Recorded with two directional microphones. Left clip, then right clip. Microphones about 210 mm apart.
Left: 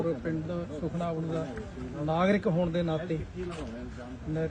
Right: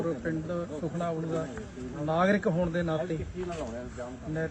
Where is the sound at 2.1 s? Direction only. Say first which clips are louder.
Right 1 dB; 15° left (ahead or behind).